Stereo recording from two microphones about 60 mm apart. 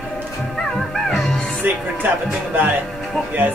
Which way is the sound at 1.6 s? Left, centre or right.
Right.